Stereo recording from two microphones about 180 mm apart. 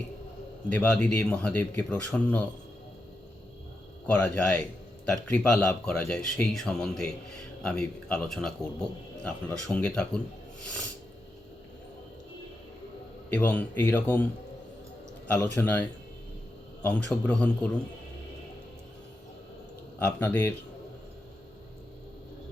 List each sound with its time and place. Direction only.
0.7 s speech: 5° left (ahead or behind)
4.0 s a man's voice: 5° left (ahead or behind)
13.3 s speech: 10° left (ahead or behind)
15.5 s speech: 10° left (ahead or behind)
20.0 s speech: 10° left (ahead or behind)